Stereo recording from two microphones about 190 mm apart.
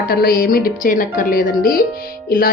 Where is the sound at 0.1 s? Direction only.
50° left (ahead or behind).